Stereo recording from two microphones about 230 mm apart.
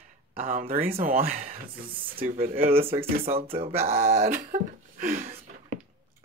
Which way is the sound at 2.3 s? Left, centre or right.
Right.